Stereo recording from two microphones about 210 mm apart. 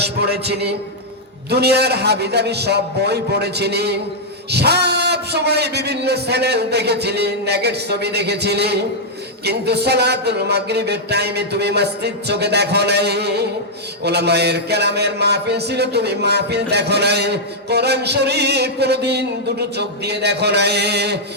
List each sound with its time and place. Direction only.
0.0 s speech: 50° right (ahead or behind)